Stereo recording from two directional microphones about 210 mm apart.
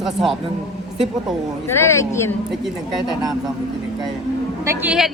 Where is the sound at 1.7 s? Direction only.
10° left (ahead or behind).